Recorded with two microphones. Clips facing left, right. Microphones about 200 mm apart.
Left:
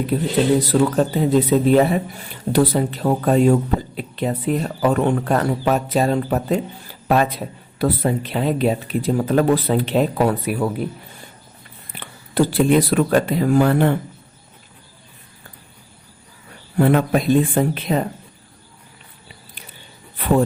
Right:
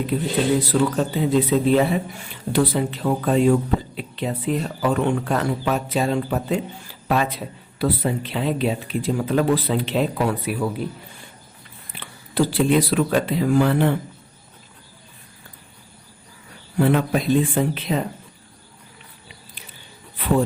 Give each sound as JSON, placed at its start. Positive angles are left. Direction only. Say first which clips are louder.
{"t": 0.1, "sound": "speech", "louder": "left 3 dB", "side_deg": 40}
{"t": 11.9, "sound": "speech", "louder": "left 3 dB", "side_deg": 50}
{"t": 16.7, "sound": "speech", "louder": "left 3 dB", "side_deg": 50}